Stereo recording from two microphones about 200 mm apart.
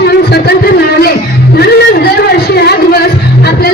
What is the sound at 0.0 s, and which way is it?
Music, 55° left (ahead or behind).